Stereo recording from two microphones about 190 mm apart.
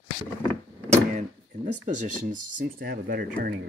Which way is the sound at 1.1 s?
40° right (ahead or behind).